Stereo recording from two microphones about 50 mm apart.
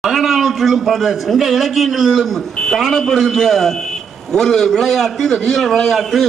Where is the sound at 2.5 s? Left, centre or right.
Centre.